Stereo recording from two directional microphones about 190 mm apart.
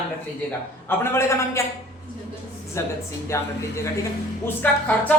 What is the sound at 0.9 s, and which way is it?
Speech, 15° left (ahead or behind).